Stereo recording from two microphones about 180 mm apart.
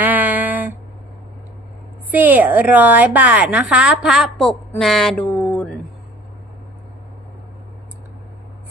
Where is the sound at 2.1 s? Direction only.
10° right (ahead or behind); by 5.7 s 5° left (ahead or behind).